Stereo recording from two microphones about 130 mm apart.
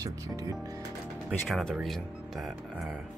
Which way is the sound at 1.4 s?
Centre (ahead or behind).